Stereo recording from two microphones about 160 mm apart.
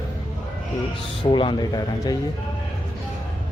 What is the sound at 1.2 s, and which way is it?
Speech, 30° left (ahead or behind).